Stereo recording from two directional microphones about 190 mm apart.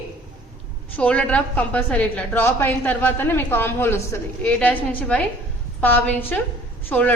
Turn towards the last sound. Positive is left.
turn(degrees=10)  # may be behind; listen again after turning